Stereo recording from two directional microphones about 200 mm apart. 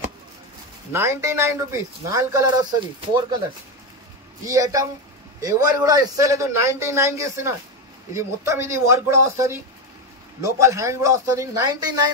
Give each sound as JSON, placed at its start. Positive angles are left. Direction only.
{"t": 0.9, "sound": "a man's voice", "side_deg": -15}
{"t": 4.5, "sound": "a man's voice", "side_deg": -15}